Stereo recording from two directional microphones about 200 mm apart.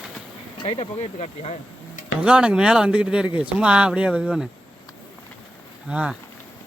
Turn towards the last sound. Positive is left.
turn(degrees=-5)  # may be behind; listen again after turning